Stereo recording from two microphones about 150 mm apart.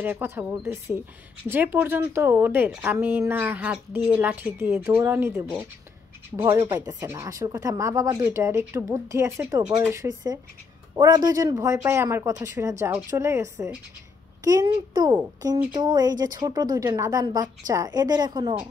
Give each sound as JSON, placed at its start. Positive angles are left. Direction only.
{"t": 0.0, "sound": "a woman's voice", "side_deg": -15}